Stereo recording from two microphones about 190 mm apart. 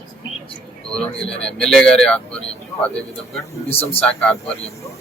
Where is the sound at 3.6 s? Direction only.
30° left (ahead or behind).